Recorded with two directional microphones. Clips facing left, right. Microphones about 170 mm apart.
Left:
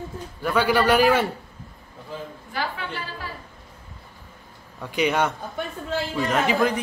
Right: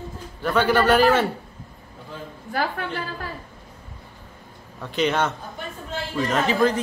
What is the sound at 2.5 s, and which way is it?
Speech, 50° right (ahead or behind).